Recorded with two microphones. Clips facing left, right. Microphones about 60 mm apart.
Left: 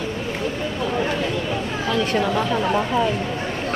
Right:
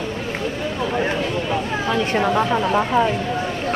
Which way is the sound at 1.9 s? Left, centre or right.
Right.